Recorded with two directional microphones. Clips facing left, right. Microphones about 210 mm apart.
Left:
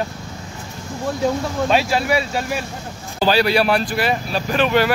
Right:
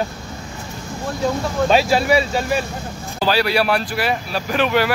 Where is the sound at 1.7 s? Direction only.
Centre (ahead or behind).